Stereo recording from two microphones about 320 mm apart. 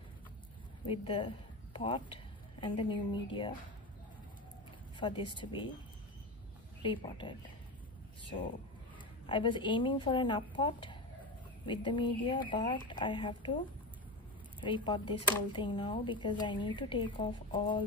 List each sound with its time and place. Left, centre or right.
0.8 s speech: centre
4.9 s speech: centre
6.8 s speech: centre
9.2 s speech: centre
14.6 s speech: centre